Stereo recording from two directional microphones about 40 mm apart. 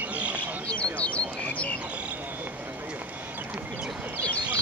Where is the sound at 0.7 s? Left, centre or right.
Left.